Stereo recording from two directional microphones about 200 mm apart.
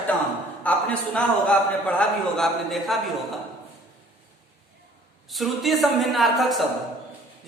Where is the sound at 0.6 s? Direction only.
5° left (ahead or behind).